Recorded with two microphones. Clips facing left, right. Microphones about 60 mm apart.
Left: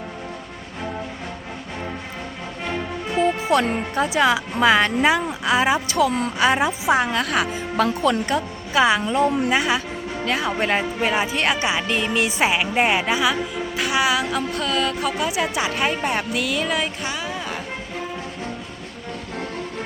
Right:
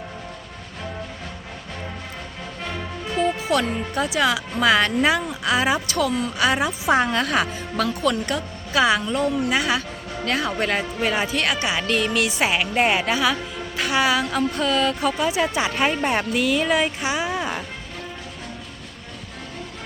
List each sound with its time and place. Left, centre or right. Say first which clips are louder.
2.6 s music: left 4 dB; centre
3.9 s speech: left 3 dB; left
6.8 s a woman's voice: right 3 dB; centre
7.4 s speech: left 3 dB; centre
7.9 s a woman's voice: left 2 dB; left; by 17.5 s centre